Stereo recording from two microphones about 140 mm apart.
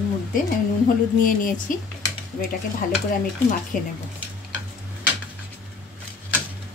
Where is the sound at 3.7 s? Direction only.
70° left (ahead or behind).